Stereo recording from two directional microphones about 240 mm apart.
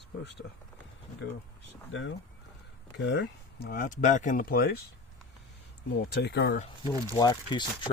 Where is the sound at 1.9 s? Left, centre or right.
Left.